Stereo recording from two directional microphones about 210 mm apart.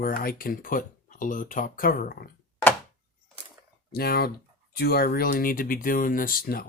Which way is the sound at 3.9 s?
45° left (ahead or behind).